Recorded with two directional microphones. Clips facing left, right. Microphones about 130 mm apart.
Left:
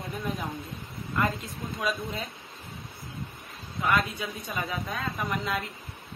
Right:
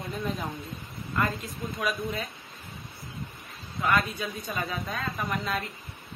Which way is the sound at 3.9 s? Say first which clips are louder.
Even; 25° left (ahead or behind).